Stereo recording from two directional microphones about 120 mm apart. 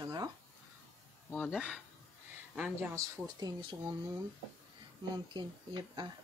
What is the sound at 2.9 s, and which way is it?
Speech, 25° right (ahead or behind).